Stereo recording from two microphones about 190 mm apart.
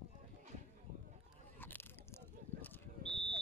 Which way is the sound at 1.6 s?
10° left (ahead or behind).